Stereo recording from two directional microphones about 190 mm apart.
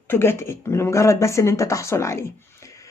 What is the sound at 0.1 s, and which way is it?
Speech, 10° left (ahead or behind).